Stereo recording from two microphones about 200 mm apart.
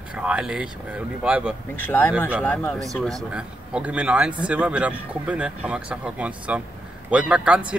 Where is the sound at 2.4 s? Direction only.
5° left (ahead or behind).